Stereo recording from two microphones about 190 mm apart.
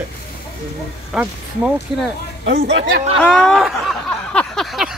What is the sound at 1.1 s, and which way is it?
Speech, centre (ahead or behind).